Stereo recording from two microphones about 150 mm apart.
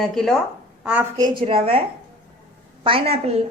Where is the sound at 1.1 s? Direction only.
30° right (ahead or behind).